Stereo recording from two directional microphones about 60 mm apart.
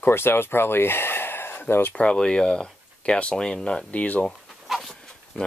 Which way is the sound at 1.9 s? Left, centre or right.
Centre.